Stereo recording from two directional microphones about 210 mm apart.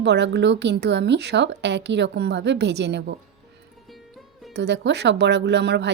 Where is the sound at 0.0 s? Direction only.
55° right (ahead or behind).